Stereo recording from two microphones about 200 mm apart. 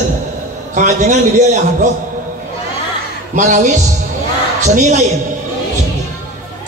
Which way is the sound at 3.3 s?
35° right (ahead or behind).